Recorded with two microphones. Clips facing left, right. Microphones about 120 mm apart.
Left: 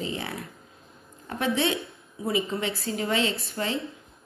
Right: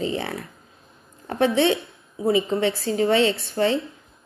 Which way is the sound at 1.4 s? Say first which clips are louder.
Right 7 dB; 30° right (ahead or behind).